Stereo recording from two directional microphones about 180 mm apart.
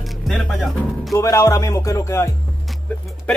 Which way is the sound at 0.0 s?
Centre (ahead or behind).